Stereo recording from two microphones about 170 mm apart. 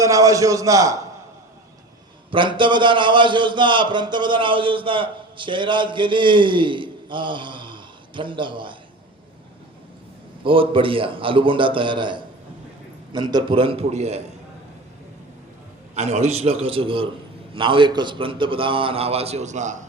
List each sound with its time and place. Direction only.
0.0 s a man's voice: 20° right (ahead or behind)
2.3 s a man's voice: 30° right (ahead or behind)
10.4 s a man's voice: 30° right (ahead or behind)
16.0 s a man's voice: 40° right (ahead or behind)